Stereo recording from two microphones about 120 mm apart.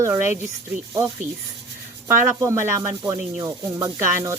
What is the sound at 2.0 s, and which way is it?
Speech, 20° right (ahead or behind).